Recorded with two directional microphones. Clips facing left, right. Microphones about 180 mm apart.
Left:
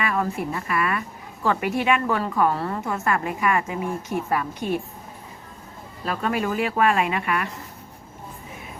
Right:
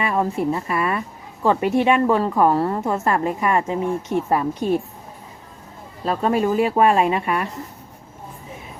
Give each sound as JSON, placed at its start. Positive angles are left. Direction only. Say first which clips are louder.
{"t": 0.0, "sound": "a woman's voice", "louder": "right 4 dB", "side_deg": -30}
{"t": 6.1, "sound": "a woman's voice", "louder": "right 5 dB", "side_deg": -30}